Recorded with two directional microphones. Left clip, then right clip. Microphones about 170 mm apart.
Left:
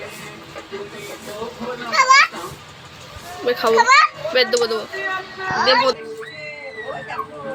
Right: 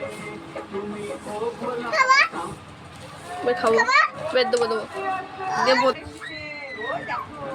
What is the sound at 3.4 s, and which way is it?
Speech, centre (ahead or behind).